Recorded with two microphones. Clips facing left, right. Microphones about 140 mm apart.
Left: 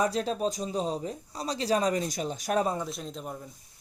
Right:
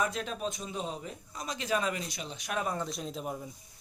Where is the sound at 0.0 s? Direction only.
35° left (ahead or behind).